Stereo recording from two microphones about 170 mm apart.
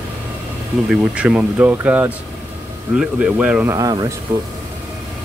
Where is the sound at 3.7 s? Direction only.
25° right (ahead or behind).